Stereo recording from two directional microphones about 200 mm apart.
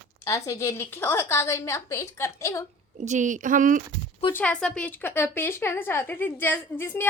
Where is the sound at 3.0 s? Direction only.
40° right (ahead or behind).